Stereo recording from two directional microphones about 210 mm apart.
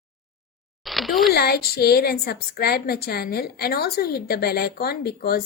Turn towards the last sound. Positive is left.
turn(degrees=50)  # may be behind; listen again after turning